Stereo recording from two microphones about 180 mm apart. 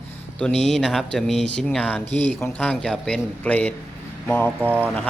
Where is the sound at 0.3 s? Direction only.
5° left (ahead or behind).